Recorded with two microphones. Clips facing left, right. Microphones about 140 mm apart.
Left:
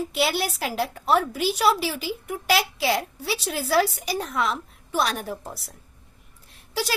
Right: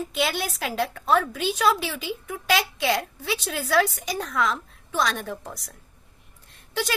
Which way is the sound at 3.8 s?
35° left (ahead or behind).